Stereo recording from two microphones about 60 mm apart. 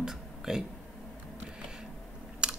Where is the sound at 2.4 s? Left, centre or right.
Centre.